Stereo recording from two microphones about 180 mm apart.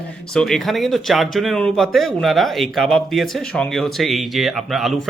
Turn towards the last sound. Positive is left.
turn(degrees=0)  # may be behind; listen again after turning